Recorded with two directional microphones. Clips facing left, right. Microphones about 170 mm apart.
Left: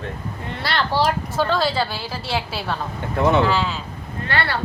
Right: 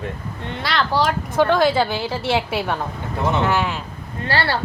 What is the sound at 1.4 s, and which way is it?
A woman's voice, 15° right (ahead or behind).